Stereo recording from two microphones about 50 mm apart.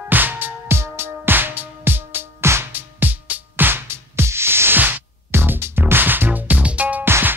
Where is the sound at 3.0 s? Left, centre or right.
Right.